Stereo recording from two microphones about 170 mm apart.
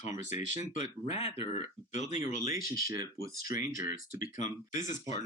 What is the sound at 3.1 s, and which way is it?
Speech, 60° left (ahead or behind).